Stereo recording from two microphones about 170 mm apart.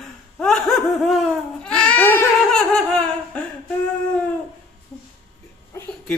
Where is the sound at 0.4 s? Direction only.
Centre (ahead or behind).